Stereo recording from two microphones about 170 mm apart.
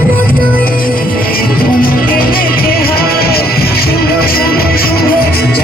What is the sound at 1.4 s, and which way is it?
Music, 60° left (ahead or behind).